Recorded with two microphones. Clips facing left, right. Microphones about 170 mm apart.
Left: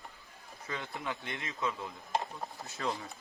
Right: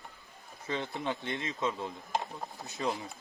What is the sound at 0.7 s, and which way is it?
Speech, 30° right (ahead or behind).